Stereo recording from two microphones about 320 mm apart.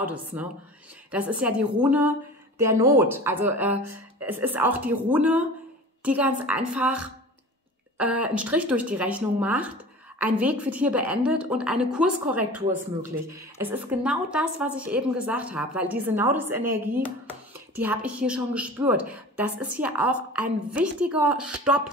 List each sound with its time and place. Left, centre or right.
0.0 s a woman's voice: centre